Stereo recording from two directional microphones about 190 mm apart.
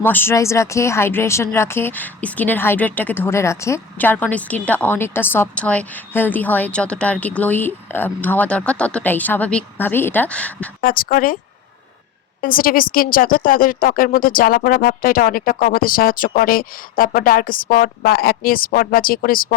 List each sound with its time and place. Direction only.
0.0 s a woman's voice: 10° left (ahead or behind)
10.8 s a woman's voice: 50° left (ahead or behind)
12.4 s a woman's voice: 50° left (ahead or behind)